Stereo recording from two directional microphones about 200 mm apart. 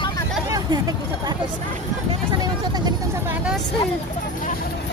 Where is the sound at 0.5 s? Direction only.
20° right (ahead or behind).